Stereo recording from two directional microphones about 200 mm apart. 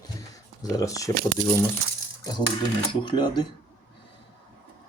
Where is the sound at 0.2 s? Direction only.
15° left (ahead or behind).